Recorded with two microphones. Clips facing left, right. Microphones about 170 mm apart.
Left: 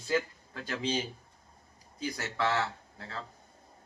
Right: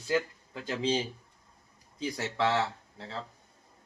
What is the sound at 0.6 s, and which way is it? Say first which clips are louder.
Speech: right 3 dB; 25° right (ahead or behind).